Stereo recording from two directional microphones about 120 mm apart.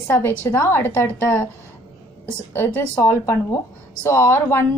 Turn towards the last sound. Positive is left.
turn(degrees=20)  # may be behind; listen again after turning